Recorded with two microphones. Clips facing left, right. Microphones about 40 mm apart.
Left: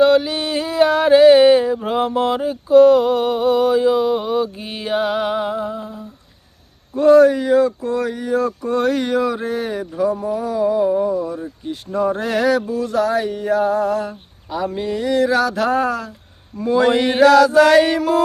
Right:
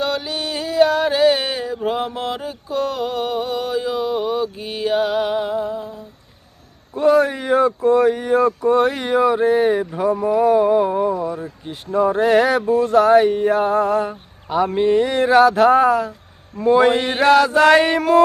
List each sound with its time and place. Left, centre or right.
0.0 s a sound: centre
6.9 s a man's voice: centre
7.3 s speech: right
8.6 s speech: centre; by 11.3 s right
11.3 s speech: centre
16.9 s a sound: centre
17.2 s speech: right